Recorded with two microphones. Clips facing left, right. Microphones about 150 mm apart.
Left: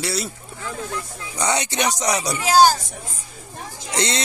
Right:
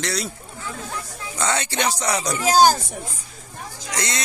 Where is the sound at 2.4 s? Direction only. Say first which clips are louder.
Left 1 dB; 45° right (ahead or behind).